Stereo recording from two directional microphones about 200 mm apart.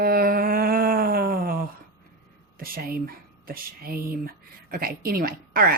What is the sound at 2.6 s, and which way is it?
A woman's voice, 45° right (ahead or behind).